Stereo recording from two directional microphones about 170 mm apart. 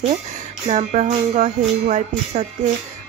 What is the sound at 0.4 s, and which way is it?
Speech, 45° right (ahead or behind).